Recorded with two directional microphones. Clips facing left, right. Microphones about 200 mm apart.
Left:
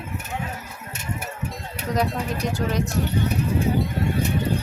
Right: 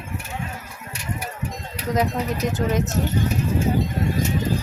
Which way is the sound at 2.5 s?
20° right (ahead or behind).